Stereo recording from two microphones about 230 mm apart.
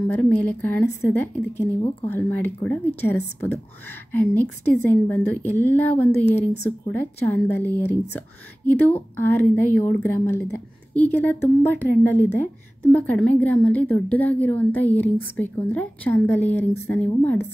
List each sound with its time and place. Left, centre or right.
0.1 s a woman's voice: centre